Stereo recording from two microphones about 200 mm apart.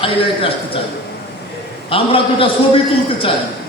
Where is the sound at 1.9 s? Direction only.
25° left (ahead or behind).